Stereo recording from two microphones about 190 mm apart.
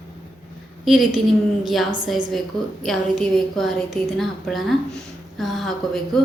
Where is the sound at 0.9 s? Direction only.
Centre (ahead or behind).